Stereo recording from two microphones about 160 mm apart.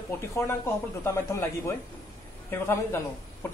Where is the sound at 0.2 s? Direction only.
20° left (ahead or behind).